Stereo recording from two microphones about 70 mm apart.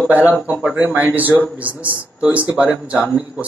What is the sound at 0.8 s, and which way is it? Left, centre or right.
A man's voice, right.